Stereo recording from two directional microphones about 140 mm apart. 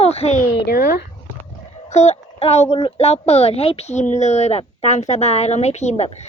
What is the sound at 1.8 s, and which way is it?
A woman's voice, 50° left (ahead or behind).